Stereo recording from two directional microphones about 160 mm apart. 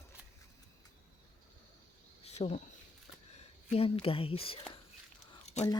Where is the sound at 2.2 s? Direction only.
40° left (ahead or behind).